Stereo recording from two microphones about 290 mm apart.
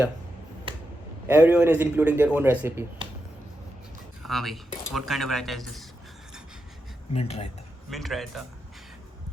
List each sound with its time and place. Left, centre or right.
1.3 s speech: centre
4.2 s a man's voice: centre
7.1 s speech: left
7.9 s a man's voice: centre